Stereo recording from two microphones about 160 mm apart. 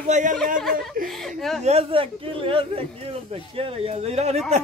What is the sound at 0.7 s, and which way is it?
Speech, 60° right (ahead or behind).